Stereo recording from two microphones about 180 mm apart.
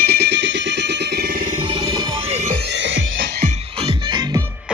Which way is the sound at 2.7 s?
85° right.